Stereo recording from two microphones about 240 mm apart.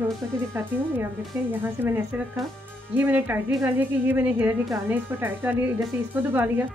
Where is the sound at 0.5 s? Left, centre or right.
Centre.